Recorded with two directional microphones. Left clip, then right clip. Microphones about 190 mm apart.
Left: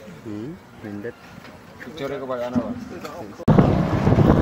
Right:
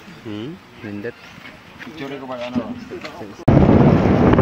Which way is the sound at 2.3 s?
15° left (ahead or behind).